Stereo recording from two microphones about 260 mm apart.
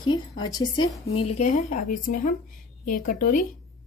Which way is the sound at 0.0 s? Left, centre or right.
Centre.